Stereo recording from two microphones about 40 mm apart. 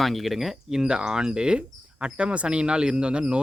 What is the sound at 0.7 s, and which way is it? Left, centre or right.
Speech, centre.